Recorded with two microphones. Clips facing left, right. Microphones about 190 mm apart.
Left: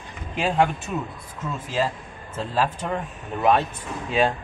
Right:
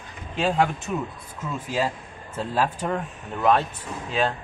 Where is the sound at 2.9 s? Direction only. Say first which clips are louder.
Left 1 dB; 5° left (ahead or behind).